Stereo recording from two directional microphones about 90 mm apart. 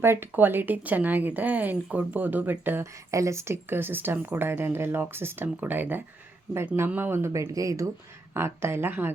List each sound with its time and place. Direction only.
0.0 s speech: 25° right (ahead or behind)
2.9 s speech: 35° right (ahead or behind)
8.3 s speech: 30° right (ahead or behind)